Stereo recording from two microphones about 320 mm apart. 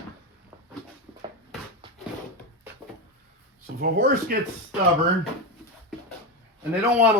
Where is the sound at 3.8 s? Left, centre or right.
Right.